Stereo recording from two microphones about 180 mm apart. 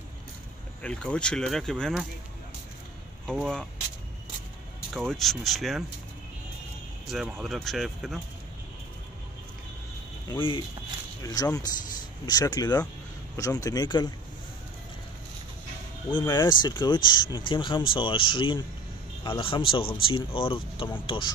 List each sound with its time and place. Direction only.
0.8 s speech: 5° left (ahead or behind)
3.3 s speech: 5° left (ahead or behind)
4.9 s speech: centre (ahead or behind)
7.1 s speech: centre (ahead or behind)
10.3 s speech: 30° left (ahead or behind)
16.1 s speech: 25° left (ahead or behind)